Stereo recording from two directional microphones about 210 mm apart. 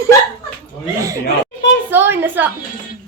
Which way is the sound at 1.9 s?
10° right (ahead or behind).